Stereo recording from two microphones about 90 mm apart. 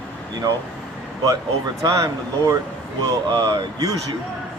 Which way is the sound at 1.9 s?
35° right (ahead or behind).